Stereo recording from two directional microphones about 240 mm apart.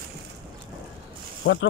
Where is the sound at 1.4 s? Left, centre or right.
Left.